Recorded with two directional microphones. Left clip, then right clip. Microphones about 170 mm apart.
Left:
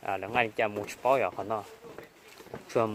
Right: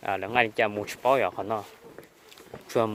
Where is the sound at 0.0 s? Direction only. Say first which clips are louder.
Right 4 dB; 60° right (ahead or behind).